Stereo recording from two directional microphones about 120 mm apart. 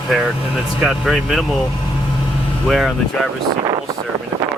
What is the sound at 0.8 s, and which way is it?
Speech, 5° right (ahead or behind).